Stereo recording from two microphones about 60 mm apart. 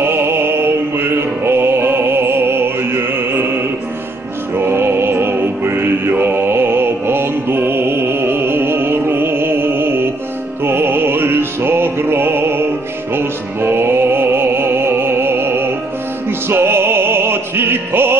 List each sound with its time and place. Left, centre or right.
0.0 s music: right
4.6 s music: right
10.6 s music: right